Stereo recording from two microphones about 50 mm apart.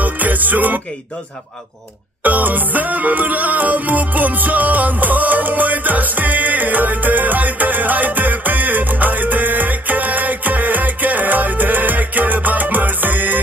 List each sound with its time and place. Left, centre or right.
0.0 s music: right
2.2 s music: right